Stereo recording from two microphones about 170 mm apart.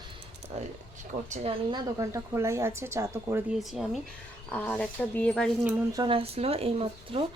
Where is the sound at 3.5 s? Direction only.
Centre (ahead or behind).